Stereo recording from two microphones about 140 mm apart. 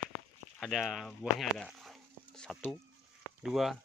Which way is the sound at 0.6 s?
Centre (ahead or behind).